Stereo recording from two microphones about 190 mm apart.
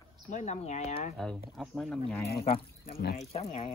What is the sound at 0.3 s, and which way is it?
Speech, 40° left (ahead or behind).